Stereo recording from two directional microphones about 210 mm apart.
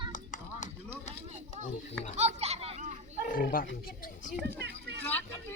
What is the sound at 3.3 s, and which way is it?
Speech, 45° left (ahead or behind).